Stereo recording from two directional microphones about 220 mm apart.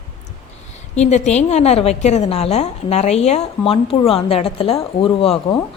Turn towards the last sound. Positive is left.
turn(degrees=25)  # may be behind; listen again after turning